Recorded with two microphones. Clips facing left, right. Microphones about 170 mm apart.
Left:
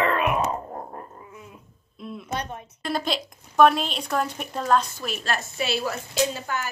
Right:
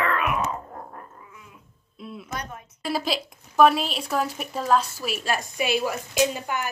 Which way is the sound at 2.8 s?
5° right (ahead or behind).